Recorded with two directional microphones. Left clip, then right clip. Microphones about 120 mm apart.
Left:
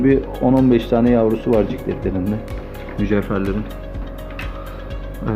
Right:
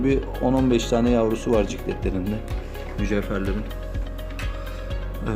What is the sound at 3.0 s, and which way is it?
Speech, 15° right (ahead or behind).